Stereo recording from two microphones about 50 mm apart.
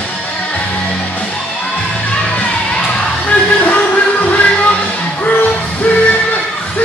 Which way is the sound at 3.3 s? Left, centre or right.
Left.